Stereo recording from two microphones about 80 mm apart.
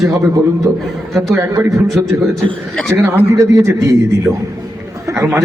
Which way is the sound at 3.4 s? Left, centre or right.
Right.